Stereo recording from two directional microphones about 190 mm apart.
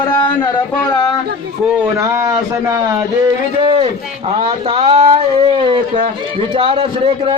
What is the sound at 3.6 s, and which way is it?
A man's voice, 30° right (ahead or behind).